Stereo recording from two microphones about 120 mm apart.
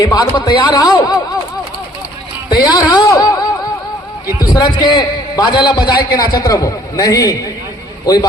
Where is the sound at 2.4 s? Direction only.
35° left (ahead or behind).